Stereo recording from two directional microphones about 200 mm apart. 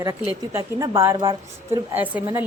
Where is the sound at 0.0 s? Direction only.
15° right (ahead or behind).